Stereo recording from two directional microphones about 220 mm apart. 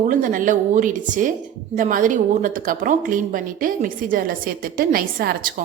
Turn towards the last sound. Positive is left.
turn(degrees=-40)  # may be behind; listen again after turning